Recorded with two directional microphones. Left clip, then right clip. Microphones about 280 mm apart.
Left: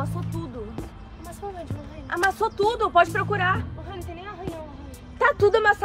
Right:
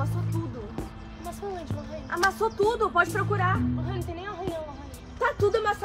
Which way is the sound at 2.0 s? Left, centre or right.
Left.